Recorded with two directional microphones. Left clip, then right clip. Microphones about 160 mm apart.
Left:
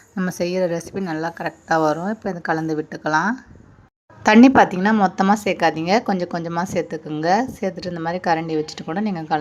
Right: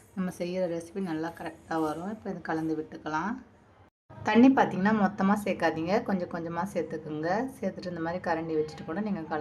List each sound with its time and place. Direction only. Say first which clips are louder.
0.2 s a woman's voice: left 10 dB; 30° left (ahead or behind)